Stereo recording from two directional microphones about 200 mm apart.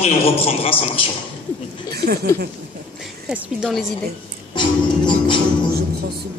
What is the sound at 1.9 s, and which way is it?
Speech, 50° right (ahead or behind).